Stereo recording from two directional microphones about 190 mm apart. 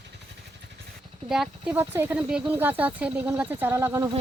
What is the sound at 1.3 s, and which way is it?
Speech, 5° right (ahead or behind).